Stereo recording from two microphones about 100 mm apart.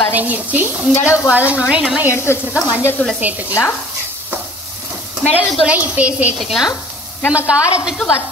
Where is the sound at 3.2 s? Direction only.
15° right (ahead or behind).